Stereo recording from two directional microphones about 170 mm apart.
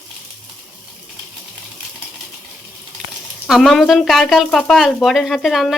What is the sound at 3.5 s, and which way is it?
Speech, centre (ahead or behind).